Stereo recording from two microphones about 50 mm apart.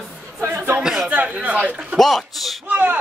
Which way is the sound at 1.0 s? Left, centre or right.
Right.